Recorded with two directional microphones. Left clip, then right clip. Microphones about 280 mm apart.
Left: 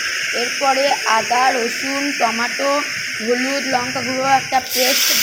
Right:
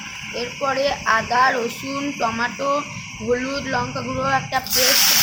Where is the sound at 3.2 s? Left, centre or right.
Centre.